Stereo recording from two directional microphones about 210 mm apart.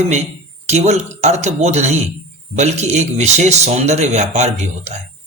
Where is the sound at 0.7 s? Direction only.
30° right (ahead or behind).